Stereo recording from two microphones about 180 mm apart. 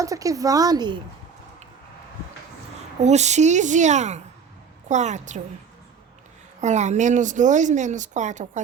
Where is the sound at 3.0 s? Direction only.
40° right (ahead or behind).